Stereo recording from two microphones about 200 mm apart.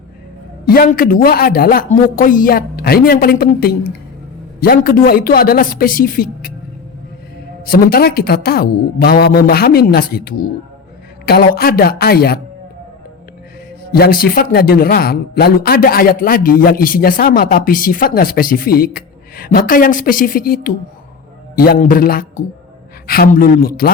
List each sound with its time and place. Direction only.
0.6 s speech: 45° left (ahead or behind)
7.6 s speech: 50° left (ahead or behind)
13.9 s speech: 50° left (ahead or behind)